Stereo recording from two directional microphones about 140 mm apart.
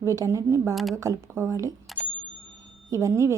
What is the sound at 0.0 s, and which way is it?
A woman's voice, 20° right (ahead or behind).